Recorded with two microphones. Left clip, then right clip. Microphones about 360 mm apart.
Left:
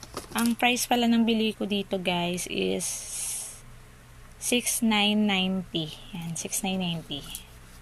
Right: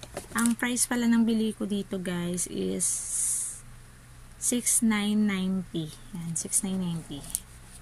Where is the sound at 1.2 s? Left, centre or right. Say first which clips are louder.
Left 2 dB; left.